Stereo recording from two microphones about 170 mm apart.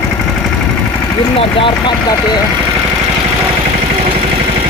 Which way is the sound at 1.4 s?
30° left (ahead or behind).